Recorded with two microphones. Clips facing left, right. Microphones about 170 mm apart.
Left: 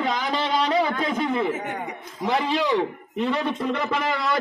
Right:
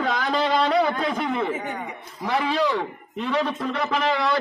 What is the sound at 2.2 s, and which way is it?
Speech, 20° left (ahead or behind).